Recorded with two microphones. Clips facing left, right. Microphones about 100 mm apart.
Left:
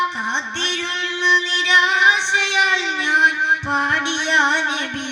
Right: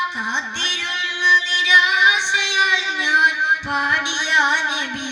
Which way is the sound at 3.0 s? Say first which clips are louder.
Right 1 dB; 15° right (ahead or behind).